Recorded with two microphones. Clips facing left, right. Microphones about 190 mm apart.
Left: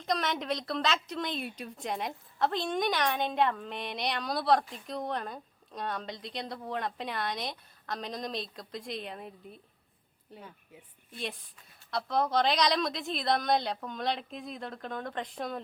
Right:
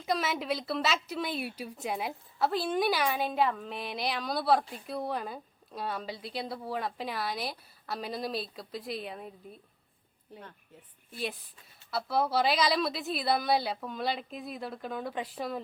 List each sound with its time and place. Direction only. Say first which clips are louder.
0.0 s speech: right 1 dB; 5° right (ahead or behind)
10.3 s speech: even; 10° left (ahead or behind)
11.9 s speech: even; 5° right (ahead or behind)